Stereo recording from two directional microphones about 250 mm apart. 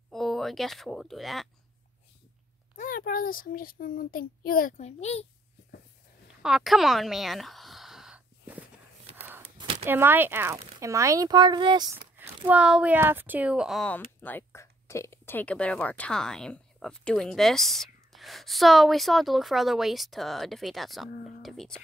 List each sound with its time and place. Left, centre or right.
0.1 s speech: centre
2.8 s a child's voice: left
6.4 s a sound: centre
9.8 s speech: centre